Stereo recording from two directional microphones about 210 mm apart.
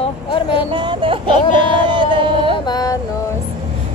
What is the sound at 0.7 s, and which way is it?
Music, 25° right (ahead or behind).